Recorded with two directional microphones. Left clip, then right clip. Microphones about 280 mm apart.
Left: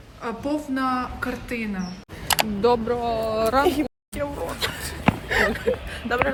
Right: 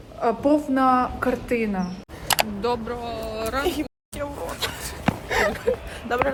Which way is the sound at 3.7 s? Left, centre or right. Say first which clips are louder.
Left 3 dB; centre.